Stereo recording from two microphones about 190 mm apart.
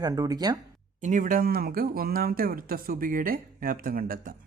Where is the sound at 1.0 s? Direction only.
45° right (ahead or behind).